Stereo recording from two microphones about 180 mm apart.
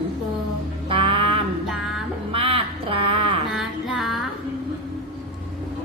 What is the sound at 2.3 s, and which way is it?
Speech, 30° right (ahead or behind).